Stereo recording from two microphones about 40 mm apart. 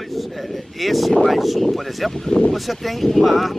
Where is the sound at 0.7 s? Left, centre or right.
Centre.